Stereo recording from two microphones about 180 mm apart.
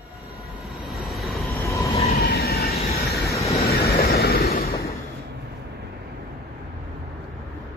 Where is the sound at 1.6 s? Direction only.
15° left (ahead or behind).